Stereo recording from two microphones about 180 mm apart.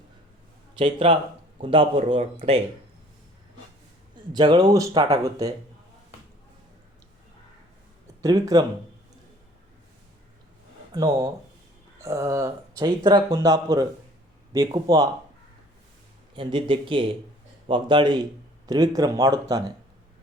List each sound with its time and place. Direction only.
0.8 s a man's voice: 30° right (ahead or behind)
4.3 s a man's voice: 25° right (ahead or behind)
8.2 s a man's voice: 20° right (ahead or behind)
10.9 s a man's voice: 20° right (ahead or behind)
16.3 s a man's voice: 25° right (ahead or behind)